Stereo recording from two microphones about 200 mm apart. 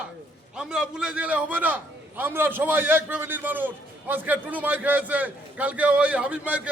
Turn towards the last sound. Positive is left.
turn(degrees=-5)  # may be behind; listen again after turning